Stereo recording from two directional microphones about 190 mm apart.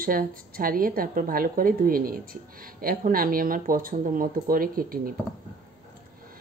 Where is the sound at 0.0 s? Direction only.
50° right (ahead or behind).